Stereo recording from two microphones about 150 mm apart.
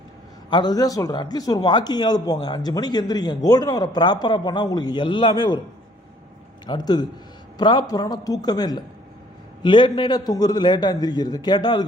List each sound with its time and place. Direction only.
0.5 s speech: 25° left (ahead or behind)
6.7 s speech: 25° left (ahead or behind)